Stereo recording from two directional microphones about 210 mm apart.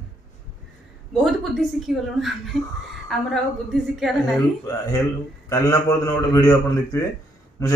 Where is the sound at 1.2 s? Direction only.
Centre (ahead or behind).